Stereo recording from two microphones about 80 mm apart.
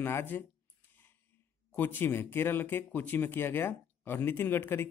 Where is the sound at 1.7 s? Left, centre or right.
Left.